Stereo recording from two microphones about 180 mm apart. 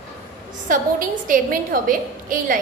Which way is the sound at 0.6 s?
50° right (ahead or behind).